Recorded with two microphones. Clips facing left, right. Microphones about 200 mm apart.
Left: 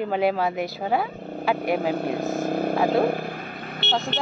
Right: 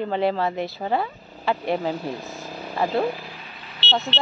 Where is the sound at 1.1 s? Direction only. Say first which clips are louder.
Left 2 dB; 60° left (ahead or behind).